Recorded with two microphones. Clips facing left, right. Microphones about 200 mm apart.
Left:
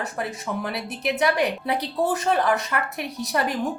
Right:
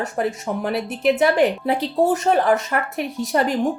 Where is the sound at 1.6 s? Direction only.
25° right (ahead or behind).